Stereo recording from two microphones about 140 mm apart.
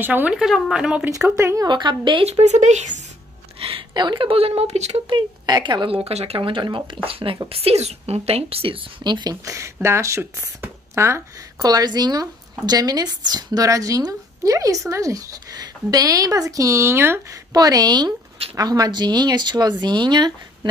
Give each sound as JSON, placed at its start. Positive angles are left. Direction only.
{"t": 0.0, "sound": "speech", "side_deg": -10}
{"t": 1.3, "sound": "a woman's voice", "side_deg": -20}
{"t": 1.7, "sound": "speech", "side_deg": -35}
{"t": 2.2, "sound": "speech", "side_deg": -50}
{"t": 3.5, "sound": "speech", "side_deg": -40}
{"t": 5.1, "sound": "a woman's voice", "side_deg": -35}